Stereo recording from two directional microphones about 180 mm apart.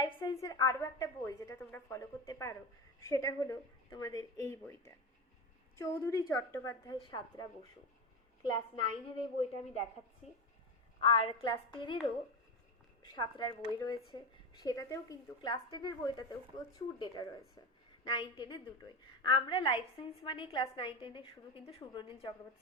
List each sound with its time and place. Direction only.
0.0 s a woman's voice: 25° left (ahead or behind)
8.4 s a woman's voice: 25° left (ahead or behind)
13.0 s a woman's voice: 25° left (ahead or behind)